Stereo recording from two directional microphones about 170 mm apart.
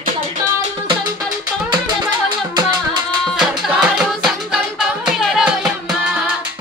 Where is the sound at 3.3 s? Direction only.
5° right (ahead or behind).